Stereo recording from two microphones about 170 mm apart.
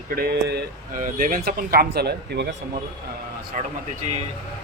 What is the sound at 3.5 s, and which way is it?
Speech, 50° right (ahead or behind).